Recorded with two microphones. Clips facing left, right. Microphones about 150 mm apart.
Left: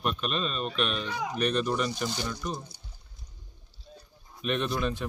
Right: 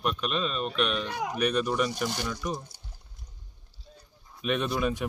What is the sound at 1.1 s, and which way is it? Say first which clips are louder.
Speech: right 1 dB; 60° right (ahead or behind).